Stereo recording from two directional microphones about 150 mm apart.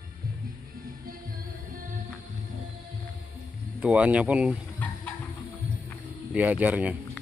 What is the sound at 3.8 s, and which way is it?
Speech, 10° right (ahead or behind).